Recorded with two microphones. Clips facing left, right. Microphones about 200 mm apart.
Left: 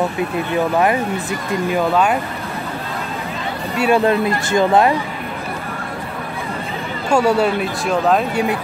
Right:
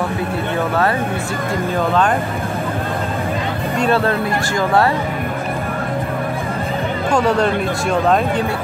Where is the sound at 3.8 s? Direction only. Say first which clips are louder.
Left 3 dB; 15° left (ahead or behind).